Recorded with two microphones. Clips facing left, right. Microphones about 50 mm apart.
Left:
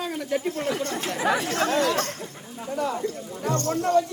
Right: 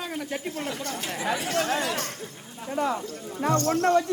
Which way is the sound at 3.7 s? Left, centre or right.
Right.